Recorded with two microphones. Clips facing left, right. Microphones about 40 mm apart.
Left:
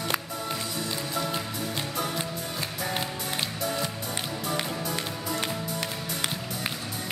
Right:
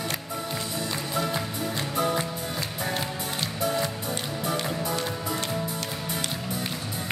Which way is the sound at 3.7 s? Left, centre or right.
Centre.